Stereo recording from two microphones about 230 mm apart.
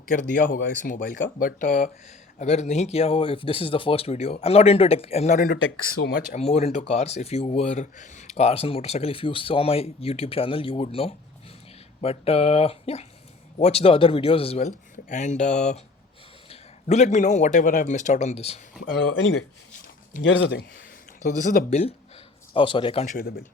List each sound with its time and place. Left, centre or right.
0.1 s a man's voice: left
5.5 s a man's voice: left
18.9 s speech: left